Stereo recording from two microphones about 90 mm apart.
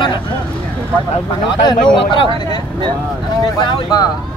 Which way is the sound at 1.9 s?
70° left (ahead or behind).